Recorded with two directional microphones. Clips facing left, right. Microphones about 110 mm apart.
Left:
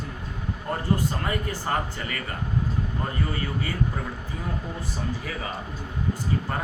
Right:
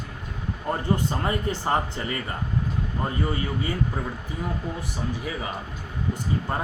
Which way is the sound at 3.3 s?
20° right (ahead or behind).